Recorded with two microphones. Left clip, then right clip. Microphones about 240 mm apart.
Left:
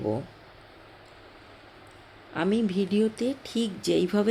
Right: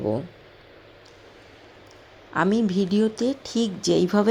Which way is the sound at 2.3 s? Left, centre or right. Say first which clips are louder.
Right 4 dB; centre.